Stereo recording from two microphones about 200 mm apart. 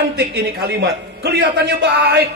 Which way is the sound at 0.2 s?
55° right (ahead or behind).